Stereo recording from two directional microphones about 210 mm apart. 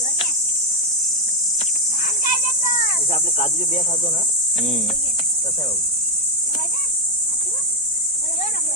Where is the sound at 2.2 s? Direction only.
35° left (ahead or behind).